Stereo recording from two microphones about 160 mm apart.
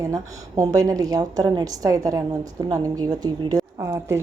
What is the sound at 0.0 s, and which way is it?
A woman's voice, 20° right (ahead or behind).